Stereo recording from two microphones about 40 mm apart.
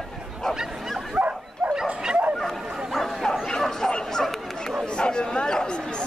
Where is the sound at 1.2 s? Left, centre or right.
Right.